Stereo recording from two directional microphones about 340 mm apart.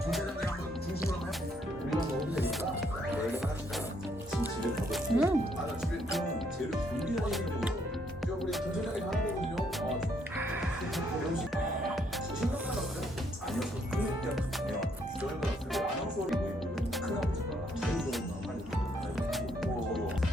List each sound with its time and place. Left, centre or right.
1.9 s music: centre
4.9 s music: centre
7.2 s music: centre
10.3 s music: centre
13.5 s music: centre